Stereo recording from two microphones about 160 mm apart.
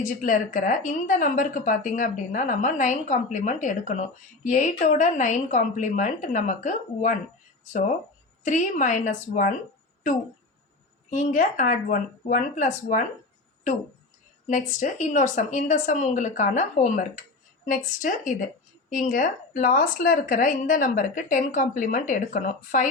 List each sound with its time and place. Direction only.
0.0 s speech: 55° left (ahead or behind)
8.4 s speech: 50° left (ahead or behind)
11.1 s speech: 50° left (ahead or behind)
14.4 s a woman's voice: 50° left (ahead or behind)